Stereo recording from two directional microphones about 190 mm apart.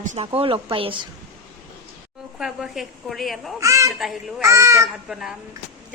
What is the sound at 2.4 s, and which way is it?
A woman's voice, centre (ahead or behind).